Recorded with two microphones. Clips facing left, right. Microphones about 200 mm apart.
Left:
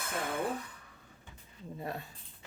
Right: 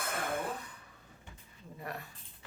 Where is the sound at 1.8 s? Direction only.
25° left (ahead or behind).